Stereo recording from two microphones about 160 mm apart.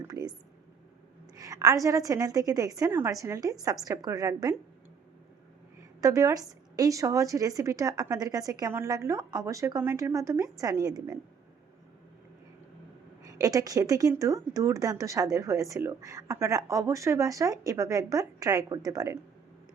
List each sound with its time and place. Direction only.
0.1 s speech: 25° right (ahead or behind)
1.4 s speech: 20° right (ahead or behind)
6.0 s speech: 20° right (ahead or behind)
13.2 s speech: 20° right (ahead or behind)